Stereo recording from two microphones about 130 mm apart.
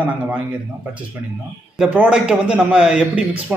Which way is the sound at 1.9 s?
10° right (ahead or behind).